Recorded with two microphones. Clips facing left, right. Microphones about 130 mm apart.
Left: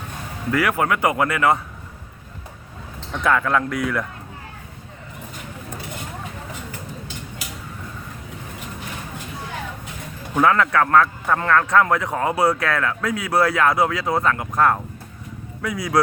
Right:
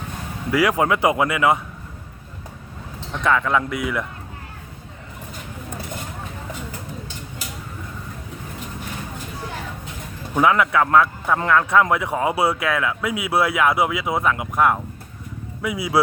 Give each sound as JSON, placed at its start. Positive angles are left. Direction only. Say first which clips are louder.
{"t": 0.5, "sound": "a man's voice", "louder": "right 2 dB", "side_deg": -15}
{"t": 3.1, "sound": "speech", "louder": "even", "side_deg": 0}
{"t": 10.3, "sound": "a man's voice", "louder": "even", "side_deg": -10}